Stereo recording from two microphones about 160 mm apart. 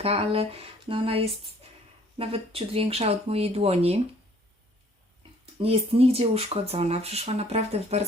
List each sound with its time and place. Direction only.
0.0 s speech: 40° right (ahead or behind)
5.5 s speech: 40° right (ahead or behind)